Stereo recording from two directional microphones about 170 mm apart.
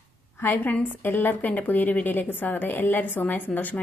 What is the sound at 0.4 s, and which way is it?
A woman's voice, 10° left (ahead or behind).